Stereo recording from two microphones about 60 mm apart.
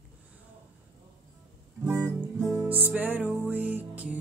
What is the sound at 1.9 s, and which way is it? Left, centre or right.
Music, right.